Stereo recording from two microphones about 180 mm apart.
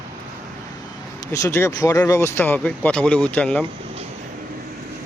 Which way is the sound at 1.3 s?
15° left (ahead or behind).